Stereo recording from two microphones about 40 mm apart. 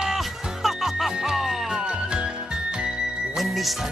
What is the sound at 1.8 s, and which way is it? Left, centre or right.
Music, right.